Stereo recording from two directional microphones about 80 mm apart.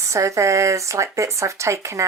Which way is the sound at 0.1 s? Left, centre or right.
Right.